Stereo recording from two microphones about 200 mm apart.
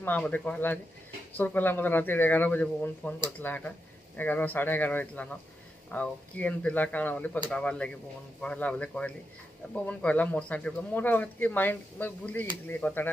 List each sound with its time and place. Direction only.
0.0 s speech: 10° left (ahead or behind)